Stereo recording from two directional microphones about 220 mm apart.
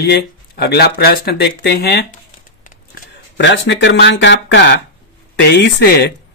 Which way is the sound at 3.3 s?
55° left (ahead or behind).